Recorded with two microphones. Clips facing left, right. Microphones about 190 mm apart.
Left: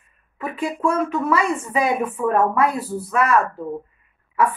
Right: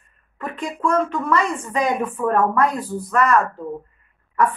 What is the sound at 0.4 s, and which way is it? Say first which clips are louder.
A woman's voice: left 2 dB; 5° left (ahead or behind).